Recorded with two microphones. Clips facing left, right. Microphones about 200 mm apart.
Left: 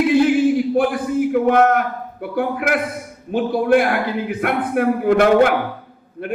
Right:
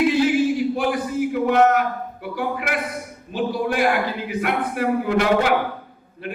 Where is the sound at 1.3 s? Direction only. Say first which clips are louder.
Left 2 dB; 50° left (ahead or behind).